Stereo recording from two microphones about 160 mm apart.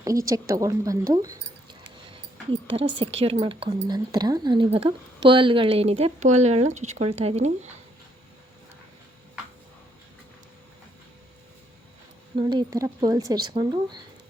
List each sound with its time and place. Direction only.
0.0 s speech: 20° right (ahead or behind)
2.5 s speech: 30° right (ahead or behind)
12.4 s speech: 30° right (ahead or behind)